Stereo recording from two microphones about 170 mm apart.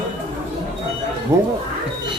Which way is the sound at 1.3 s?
20° right (ahead or behind).